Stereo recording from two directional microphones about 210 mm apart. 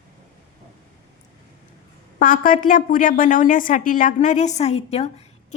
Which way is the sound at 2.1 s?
40° left (ahead or behind).